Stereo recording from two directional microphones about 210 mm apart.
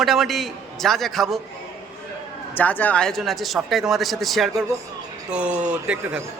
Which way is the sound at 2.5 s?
10° left (ahead or behind).